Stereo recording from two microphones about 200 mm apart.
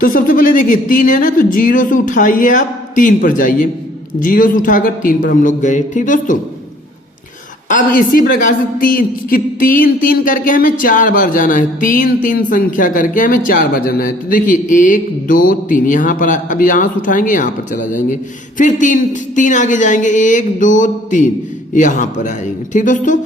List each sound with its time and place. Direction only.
0.0 s a man's voice: 45° left (ahead or behind)
7.7 s a man's voice: 45° left (ahead or behind)